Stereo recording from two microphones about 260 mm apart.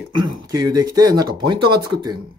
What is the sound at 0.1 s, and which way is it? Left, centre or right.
Speech, centre.